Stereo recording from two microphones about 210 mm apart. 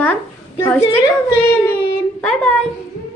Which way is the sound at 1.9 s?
5° left (ahead or behind).